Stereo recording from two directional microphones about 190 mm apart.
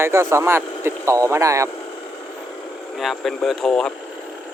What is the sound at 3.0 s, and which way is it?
Speech, centre (ahead or behind).